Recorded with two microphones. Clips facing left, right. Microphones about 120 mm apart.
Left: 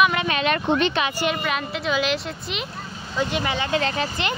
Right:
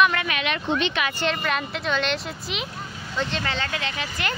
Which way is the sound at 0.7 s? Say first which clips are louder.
Left 3 dB; 45° left (ahead or behind).